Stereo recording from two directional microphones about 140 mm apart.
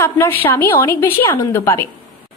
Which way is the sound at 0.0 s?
15° left (ahead or behind).